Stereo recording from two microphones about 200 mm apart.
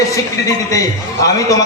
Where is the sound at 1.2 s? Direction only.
15° left (ahead or behind).